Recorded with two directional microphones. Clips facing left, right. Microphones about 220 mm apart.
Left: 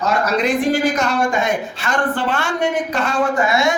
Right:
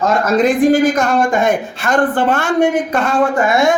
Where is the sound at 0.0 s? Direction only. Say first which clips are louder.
Right 5 dB; 50° right (ahead or behind).